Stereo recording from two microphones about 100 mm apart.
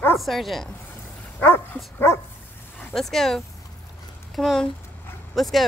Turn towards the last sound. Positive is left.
turn(degrees=0)  # may be behind; listen again after turning